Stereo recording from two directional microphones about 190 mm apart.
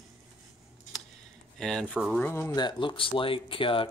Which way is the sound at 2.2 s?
15° left (ahead or behind).